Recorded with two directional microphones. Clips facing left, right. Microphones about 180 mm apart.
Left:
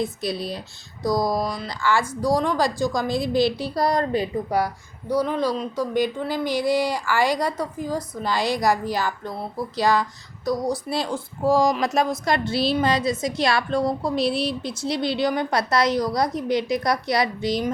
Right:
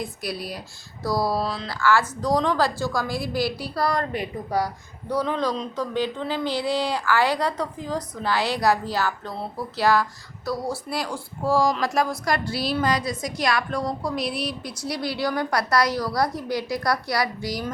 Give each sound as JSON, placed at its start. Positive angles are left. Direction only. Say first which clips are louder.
{"t": 0.0, "sound": "a woman's voice", "louder": "left 5 dB", "side_deg": 25}
{"t": 5.0, "sound": "speech", "louder": "left 2 dB", "side_deg": 10}